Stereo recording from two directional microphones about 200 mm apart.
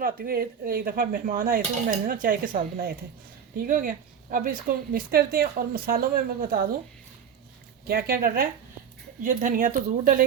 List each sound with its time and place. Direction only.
0.0 s a woman's voice: 50° right (ahead or behind)
7.9 s a woman's voice: 50° right (ahead or behind)